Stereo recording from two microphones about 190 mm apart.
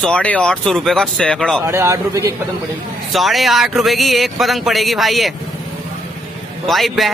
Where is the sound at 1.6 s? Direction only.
15° right (ahead or behind).